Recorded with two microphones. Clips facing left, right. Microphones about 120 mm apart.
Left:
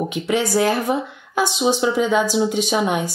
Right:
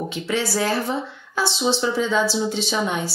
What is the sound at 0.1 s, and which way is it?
Speech, 15° left (ahead or behind).